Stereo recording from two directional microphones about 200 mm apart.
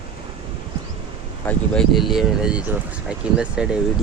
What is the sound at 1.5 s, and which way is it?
Speech, 5° left (ahead or behind).